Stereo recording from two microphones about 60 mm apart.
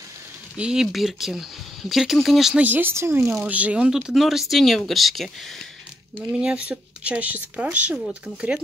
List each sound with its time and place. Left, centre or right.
0.6 s speech: centre
2.6 s speech: right
2.9 s speech: right
3.4 s speech: right
3.9 s speech: centre
6.3 s speech: centre